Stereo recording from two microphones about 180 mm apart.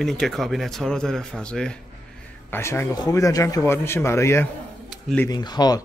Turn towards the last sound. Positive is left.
turn(degrees=25)  # may be behind; listen again after turning